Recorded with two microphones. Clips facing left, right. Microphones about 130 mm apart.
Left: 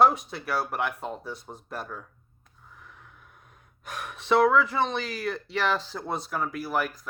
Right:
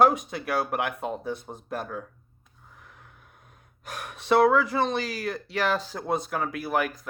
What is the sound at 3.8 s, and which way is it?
Speech, 40° right (ahead or behind).